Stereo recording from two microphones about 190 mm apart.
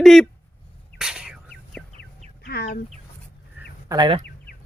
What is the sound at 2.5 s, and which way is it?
Chicken, 55° left (ahead or behind).